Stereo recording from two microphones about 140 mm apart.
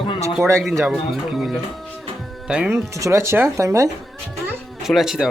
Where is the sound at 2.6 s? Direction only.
20° right (ahead or behind).